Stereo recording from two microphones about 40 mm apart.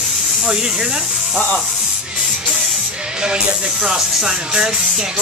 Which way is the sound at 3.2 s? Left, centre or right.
Right.